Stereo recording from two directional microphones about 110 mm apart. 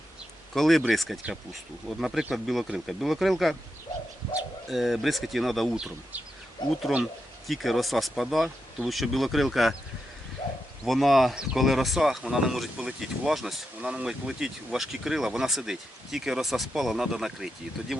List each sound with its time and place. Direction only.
0.5 s speech: 5° left (ahead or behind)
4.7 s speech: centre (ahead or behind)
6.6 s speech: 45° left (ahead or behind)
7.0 s speech: centre (ahead or behind)
10.8 s speech: centre (ahead or behind)